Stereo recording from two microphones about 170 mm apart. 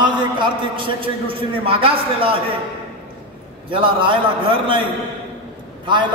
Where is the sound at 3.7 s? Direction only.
30° right (ahead or behind).